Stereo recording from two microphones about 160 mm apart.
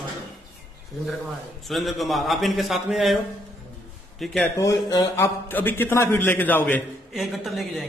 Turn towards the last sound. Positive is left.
turn(degrees=0)  # may be behind; listen again after turning